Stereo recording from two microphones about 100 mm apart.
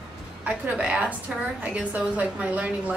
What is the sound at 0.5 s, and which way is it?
A woman's voice, 10° right (ahead or behind).